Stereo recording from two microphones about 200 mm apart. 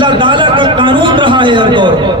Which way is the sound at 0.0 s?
25° right (ahead or behind).